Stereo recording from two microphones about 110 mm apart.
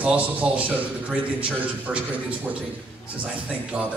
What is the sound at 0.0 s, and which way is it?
A man's voice, 10° right (ahead or behind).